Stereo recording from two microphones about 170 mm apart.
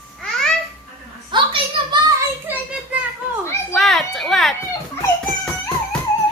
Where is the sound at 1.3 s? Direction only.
30° right (ahead or behind).